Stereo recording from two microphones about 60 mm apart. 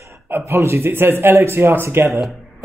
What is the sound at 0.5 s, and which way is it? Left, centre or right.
Speech, right.